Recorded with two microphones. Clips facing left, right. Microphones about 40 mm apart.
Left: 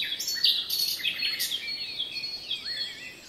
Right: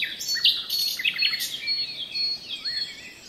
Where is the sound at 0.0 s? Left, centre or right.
Right.